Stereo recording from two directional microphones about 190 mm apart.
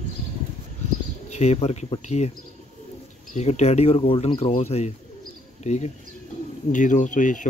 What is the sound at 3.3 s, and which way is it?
Speech, 35° left (ahead or behind).